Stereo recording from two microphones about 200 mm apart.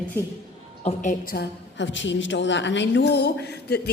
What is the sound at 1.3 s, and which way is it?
A woman's voice, 60° left (ahead or behind).